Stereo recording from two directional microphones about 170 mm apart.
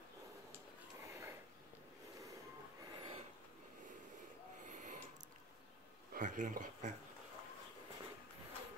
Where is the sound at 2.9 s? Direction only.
30° right (ahead or behind).